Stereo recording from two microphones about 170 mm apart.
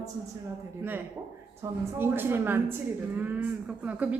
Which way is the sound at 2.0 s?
15° right (ahead or behind).